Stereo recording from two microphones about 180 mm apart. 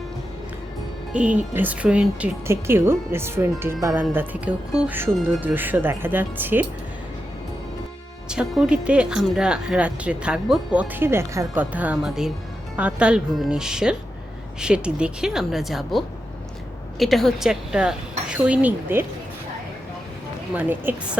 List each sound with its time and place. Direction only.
1.1 s speech: 5° right (ahead or behind)
8.3 s speech: 5° right (ahead or behind)
20.5 s speech: 10° right (ahead or behind)